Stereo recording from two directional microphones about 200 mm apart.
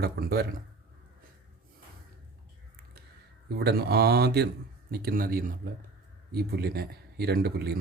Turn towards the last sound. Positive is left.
turn(degrees=-55)  # may be behind; listen again after turning